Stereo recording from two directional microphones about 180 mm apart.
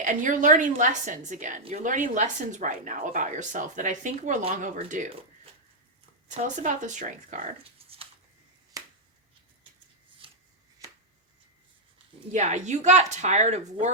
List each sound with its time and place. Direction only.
0.0 s a woman's voice: 45° right (ahead or behind)
6.6 s a woman's voice: 45° right (ahead or behind)
7.8 s a sound: 30° right (ahead or behind)
8.7 s finger snapping: 20° right (ahead or behind)
10.2 s shuffling cards: 30° right (ahead or behind)
10.8 s a sound: 20° right (ahead or behind)
12.3 s speech: 40° right (ahead or behind)